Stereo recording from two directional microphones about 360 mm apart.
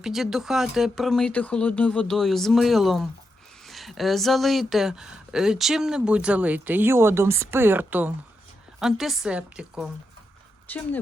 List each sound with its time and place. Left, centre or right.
0.0 s speech: centre